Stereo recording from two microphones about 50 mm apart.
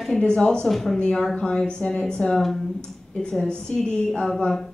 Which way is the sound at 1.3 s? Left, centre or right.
Centre.